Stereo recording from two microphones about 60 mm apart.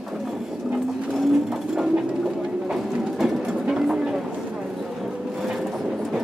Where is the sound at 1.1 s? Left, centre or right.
Centre.